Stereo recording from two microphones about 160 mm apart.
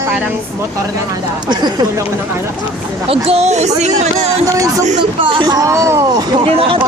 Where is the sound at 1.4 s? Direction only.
25° right (ahead or behind).